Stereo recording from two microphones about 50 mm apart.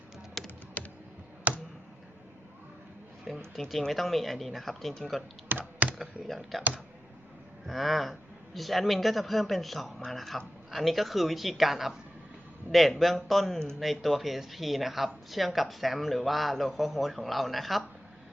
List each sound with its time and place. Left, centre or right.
0.4 s typing: centre
0.8 s computer keyboard: left
1.5 s a sound: right
3.2 s speech: centre
5.5 s computer keyboard: right
6.2 s speech: centre
7.7 s speech: centre